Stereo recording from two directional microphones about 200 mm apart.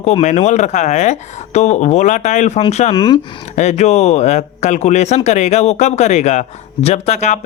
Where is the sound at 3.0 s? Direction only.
20° left (ahead or behind).